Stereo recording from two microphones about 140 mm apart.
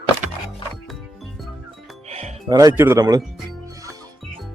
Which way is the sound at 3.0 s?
25° right (ahead or behind).